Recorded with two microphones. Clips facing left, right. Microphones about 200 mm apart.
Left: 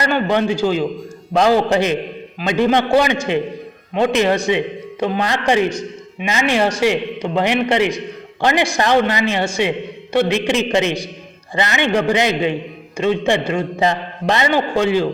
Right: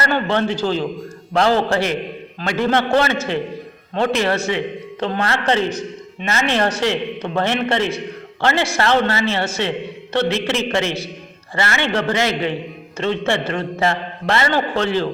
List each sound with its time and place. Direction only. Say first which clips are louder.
0.0 s a man's voice: left 2 dB; 15° left (ahead or behind)